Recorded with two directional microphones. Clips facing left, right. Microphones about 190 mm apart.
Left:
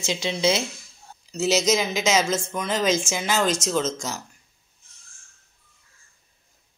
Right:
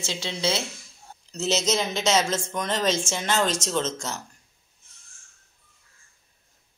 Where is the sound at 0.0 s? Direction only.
15° left (ahead or behind).